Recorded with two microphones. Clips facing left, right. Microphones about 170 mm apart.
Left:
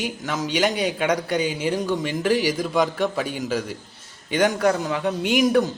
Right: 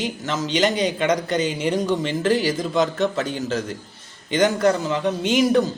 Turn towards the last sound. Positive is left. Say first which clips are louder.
# right 1 dB
turn(degrees=15)  # may be behind; listen again after turning